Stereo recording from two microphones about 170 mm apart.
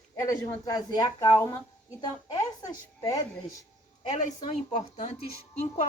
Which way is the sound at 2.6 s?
20° left (ahead or behind).